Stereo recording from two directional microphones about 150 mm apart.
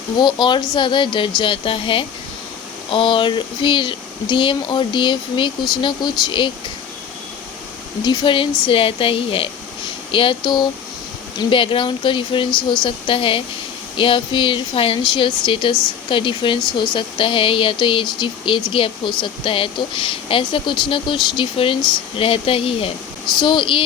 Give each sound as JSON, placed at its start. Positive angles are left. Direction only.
{"t": 0.2, "sound": "speech", "side_deg": 30}
{"t": 8.0, "sound": "speech", "side_deg": 30}